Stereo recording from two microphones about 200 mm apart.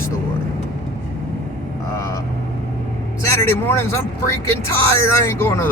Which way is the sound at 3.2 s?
15° left (ahead or behind).